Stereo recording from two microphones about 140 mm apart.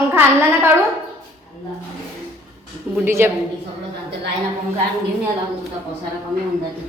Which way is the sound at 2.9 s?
15° right (ahead or behind).